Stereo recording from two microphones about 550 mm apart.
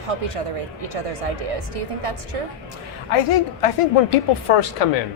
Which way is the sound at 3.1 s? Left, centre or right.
Left.